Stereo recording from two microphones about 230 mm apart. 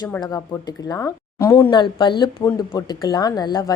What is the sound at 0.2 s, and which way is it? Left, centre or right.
Speech, centre.